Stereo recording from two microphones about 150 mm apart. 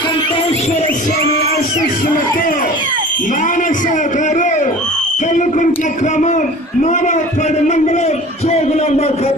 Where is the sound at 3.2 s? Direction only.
60° left (ahead or behind).